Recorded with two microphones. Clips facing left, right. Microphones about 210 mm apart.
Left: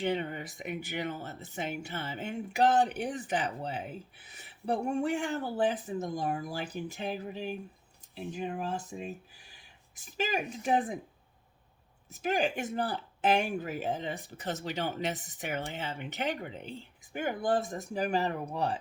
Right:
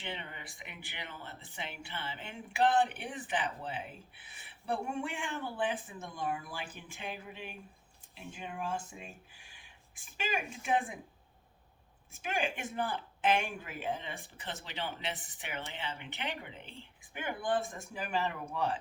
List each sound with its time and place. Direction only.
0.0 s speech: 45° left (ahead or behind)
12.1 s speech: 40° left (ahead or behind)